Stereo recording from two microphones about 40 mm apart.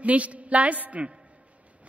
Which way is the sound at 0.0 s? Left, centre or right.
Right.